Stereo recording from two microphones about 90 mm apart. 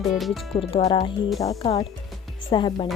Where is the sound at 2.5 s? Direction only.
65° left (ahead or behind).